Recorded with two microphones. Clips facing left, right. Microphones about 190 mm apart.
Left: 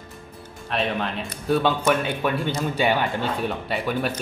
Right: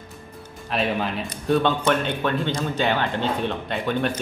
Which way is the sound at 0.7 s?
5° right (ahead or behind).